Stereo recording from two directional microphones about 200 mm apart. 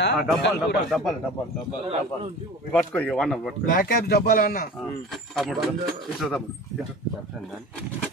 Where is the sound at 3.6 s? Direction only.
45° left (ahead or behind).